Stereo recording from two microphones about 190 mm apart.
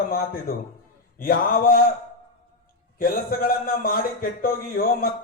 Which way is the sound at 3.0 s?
50° left (ahead or behind).